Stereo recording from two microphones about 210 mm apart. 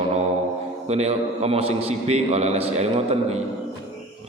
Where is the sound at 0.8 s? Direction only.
30° right (ahead or behind).